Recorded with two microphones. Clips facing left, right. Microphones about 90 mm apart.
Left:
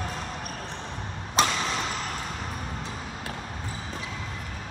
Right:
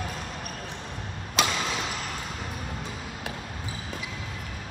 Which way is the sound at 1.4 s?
30° left (ahead or behind).